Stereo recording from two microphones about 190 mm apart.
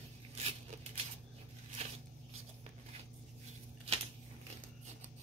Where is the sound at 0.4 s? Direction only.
30° right (ahead or behind).